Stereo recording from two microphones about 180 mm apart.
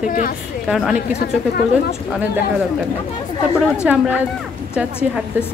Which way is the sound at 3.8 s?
5° right (ahead or behind).